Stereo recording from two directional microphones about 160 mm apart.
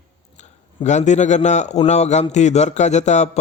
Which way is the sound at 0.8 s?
50° left (ahead or behind).